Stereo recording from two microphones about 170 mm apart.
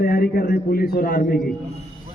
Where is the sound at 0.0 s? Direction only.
60° left (ahead or behind).